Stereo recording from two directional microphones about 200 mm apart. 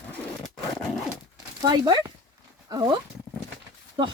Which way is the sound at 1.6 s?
20° right (ahead or behind).